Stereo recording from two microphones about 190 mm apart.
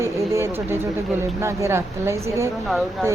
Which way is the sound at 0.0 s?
15° right (ahead or behind).